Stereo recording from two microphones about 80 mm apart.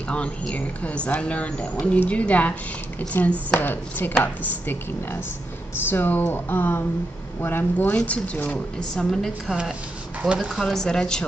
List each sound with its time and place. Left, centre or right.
0.1 s speech: centre
9.5 s speech: centre
10.6 s speech: centre